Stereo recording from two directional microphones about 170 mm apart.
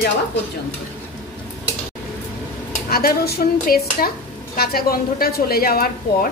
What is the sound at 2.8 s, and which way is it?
A woman's voice, 60° left (ahead or behind).